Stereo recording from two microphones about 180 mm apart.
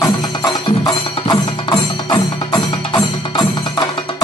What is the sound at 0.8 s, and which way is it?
Music, 25° left (ahead or behind).